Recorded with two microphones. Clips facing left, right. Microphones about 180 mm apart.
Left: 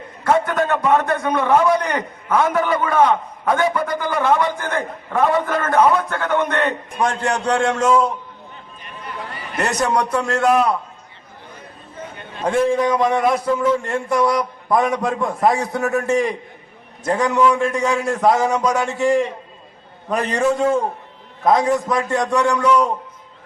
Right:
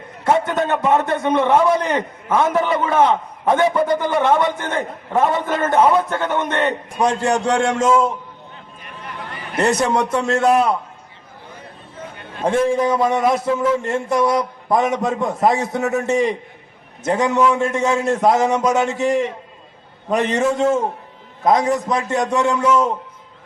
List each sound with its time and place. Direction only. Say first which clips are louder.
0.3 s a man's voice: even; 25° right (ahead or behind)
9.8 s a man's voice: right 1 dB; 25° right (ahead or behind)
12.5 s a man's voice: even; 25° right (ahead or behind)
21.4 s a man's voice: even; 20° right (ahead or behind)